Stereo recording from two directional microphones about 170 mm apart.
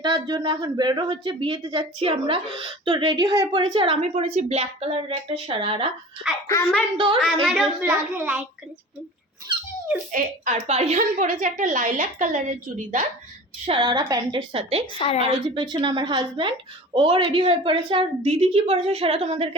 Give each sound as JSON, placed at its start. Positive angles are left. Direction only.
{"t": 0.0, "sound": "a woman's voice", "side_deg": -25}
{"t": 6.3, "sound": "a child's voice", "side_deg": 0}
{"t": 6.9, "sound": "speech", "side_deg": -30}
{"t": 7.4, "sound": "a child's voice", "side_deg": 0}
{"t": 10.1, "sound": "a woman's voice", "side_deg": -50}
{"t": 13.7, "sound": "a woman's voice", "side_deg": -30}
{"t": 14.9, "sound": "a woman's voice", "side_deg": 35}
{"t": 15.5, "sound": "a woman's voice", "side_deg": -25}